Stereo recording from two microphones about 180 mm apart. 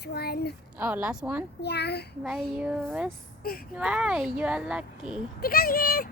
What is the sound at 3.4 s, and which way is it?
Speech, 55° left (ahead or behind).